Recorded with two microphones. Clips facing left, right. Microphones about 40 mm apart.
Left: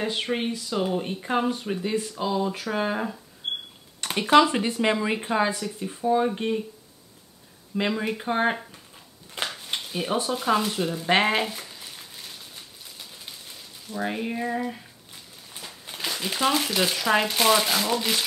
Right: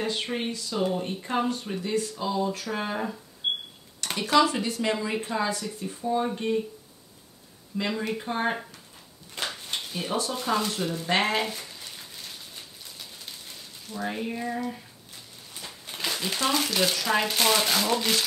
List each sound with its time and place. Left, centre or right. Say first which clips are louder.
0.0 s speech: left 2 dB; left
4.0 s speech: left 4 dB; left
7.9 s speech: left 3 dB; left
9.3 s a sound: left 2 dB; centre
10.0 s speech: left 4 dB; left
11.1 s speech: left 3 dB; left
11.4 s a sound: left 1 dB; centre
13.9 s speech: left 3 dB; left
15.6 s a sound: even; centre
16.3 s speech: left 3 dB; centre